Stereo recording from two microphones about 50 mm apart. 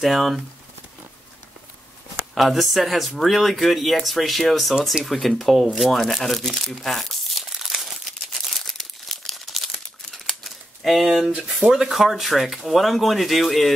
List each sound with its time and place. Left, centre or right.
0.0 s speech: centre
2.3 s speech: centre
7.3 s crumpling: centre
11.4 s speech: centre